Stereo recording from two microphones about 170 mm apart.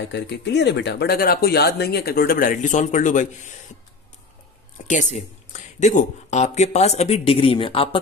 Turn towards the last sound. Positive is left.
turn(degrees=30)  # may be behind; listen again after turning